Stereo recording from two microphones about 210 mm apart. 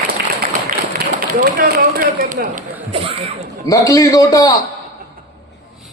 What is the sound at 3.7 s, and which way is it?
Speech, 15° left (ahead or behind).